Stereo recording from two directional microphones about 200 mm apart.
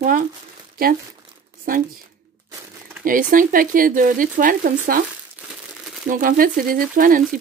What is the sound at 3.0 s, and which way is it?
Speech, 45° right (ahead or behind).